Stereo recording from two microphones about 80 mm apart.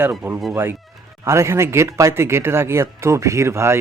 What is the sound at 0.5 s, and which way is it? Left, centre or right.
Speech, right.